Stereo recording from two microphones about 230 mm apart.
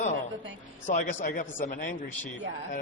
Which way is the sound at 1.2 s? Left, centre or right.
Left.